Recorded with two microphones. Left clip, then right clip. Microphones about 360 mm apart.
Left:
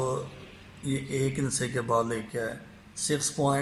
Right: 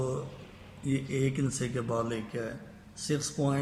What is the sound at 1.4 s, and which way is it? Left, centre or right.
Speech, left.